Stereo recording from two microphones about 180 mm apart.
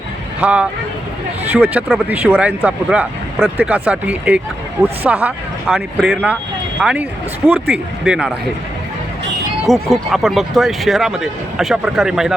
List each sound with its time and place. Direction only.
0.4 s speech: 5° right (ahead or behind)
9.6 s speech: centre (ahead or behind)